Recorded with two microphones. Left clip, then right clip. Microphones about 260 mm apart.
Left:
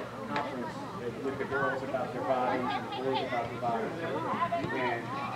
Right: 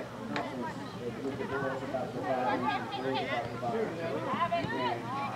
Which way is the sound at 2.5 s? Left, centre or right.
Centre.